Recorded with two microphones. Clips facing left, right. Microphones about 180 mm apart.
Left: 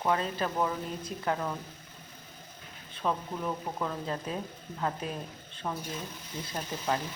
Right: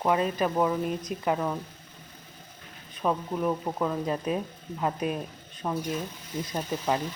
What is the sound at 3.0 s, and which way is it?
Speech, 15° right (ahead or behind).